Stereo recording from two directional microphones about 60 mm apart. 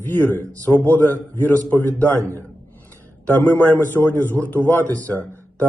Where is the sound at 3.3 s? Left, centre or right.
Left.